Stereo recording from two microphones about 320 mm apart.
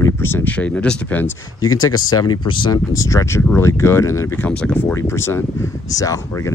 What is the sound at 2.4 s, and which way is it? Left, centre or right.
Speech, centre.